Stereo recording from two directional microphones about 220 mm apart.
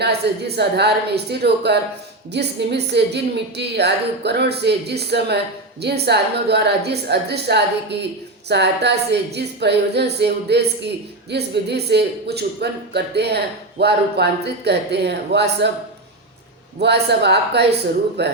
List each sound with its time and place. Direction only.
0.0 s speech: 50° right (ahead or behind)
16.8 s speech: 50° right (ahead or behind)